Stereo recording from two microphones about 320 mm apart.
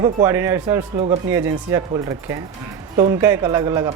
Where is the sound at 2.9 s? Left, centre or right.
Centre.